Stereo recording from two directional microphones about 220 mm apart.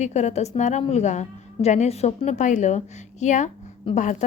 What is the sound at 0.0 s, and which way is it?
A woman's voice, 30° left (ahead or behind).